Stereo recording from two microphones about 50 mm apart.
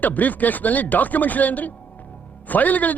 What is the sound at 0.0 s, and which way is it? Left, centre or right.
Speech, left.